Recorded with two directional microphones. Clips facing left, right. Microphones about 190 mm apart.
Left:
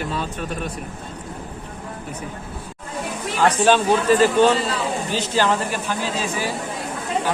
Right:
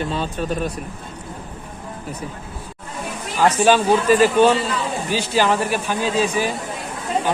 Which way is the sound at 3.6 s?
10° right (ahead or behind).